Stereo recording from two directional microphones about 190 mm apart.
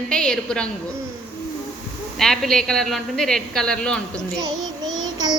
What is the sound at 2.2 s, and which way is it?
A woman's voice, centre (ahead or behind).